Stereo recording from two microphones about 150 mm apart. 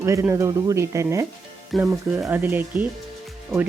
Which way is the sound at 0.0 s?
20° right (ahead or behind).